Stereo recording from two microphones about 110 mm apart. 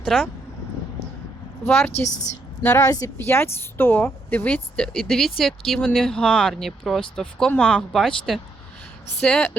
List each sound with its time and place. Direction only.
0.0 s speech: 5° right (ahead or behind)
1.6 s a woman's voice: 20° left (ahead or behind)
1.9 s a woman's voice: 90° left
2.6 s a woman's voice: 25° left (ahead or behind); by 9.5 s 5° left (ahead or behind)